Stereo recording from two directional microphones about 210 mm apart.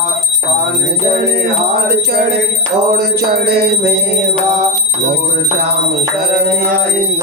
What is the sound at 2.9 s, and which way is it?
Music, 50° right (ahead or behind).